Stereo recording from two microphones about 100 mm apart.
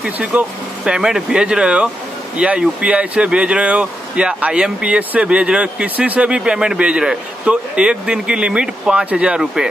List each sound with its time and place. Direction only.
0.0 s speech: 10° right (ahead or behind)